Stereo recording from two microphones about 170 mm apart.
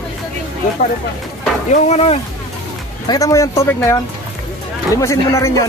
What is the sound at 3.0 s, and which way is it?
Speech, 20° left (ahead or behind).